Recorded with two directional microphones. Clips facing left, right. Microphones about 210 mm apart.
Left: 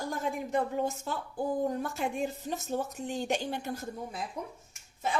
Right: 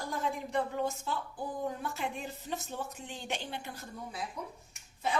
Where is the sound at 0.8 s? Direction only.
45° left (ahead or behind).